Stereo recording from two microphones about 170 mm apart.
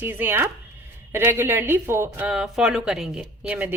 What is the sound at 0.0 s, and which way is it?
Speech, 10° right (ahead or behind).